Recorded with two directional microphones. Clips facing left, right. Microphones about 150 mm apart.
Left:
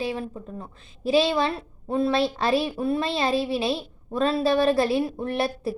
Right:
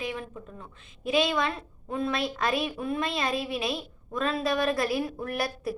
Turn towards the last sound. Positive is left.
turn(degrees=25)  # may be behind; listen again after turning